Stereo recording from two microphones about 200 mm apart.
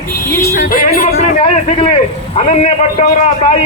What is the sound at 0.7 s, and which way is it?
Speech, 45° left (ahead or behind).